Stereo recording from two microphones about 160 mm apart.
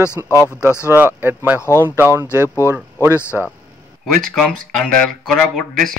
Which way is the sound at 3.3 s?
10° right (ahead or behind).